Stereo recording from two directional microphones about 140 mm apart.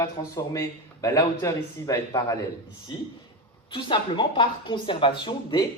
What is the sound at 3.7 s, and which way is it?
Speech, 35° left (ahead or behind).